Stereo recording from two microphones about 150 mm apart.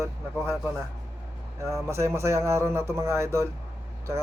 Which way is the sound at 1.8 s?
15° right (ahead or behind).